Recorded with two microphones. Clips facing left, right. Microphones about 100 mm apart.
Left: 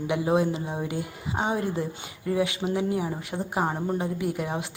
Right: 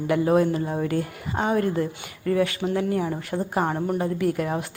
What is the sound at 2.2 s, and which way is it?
Speech, 15° left (ahead or behind).